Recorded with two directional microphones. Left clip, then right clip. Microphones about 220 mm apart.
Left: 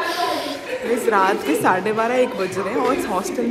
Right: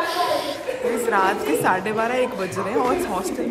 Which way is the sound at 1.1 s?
5° right (ahead or behind).